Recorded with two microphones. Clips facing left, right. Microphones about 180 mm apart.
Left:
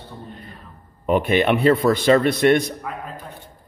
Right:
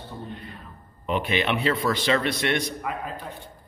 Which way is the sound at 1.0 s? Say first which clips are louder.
Left 7 dB; 50° left (ahead or behind).